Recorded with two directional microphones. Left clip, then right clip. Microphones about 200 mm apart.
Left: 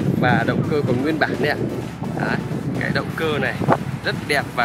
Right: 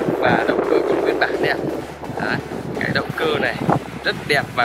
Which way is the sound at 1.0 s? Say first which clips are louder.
Right 2 dB; 30° left (ahead or behind).